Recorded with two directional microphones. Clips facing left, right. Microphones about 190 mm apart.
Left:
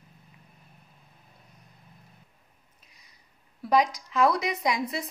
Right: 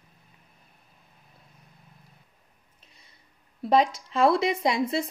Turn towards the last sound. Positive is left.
turn(degrees=-30)  # may be behind; listen again after turning